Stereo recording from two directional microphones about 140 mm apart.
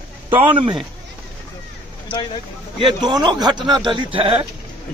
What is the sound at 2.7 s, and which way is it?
Speech, 35° right (ahead or behind).